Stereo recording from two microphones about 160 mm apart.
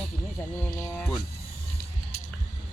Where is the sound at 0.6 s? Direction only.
10° left (ahead or behind).